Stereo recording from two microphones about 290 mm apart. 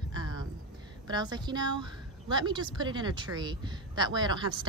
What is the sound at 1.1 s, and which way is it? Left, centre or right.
A woman's voice, centre.